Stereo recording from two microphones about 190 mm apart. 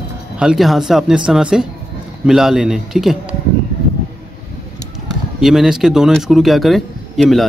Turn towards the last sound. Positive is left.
turn(degrees=0)  # may be behind; listen again after turning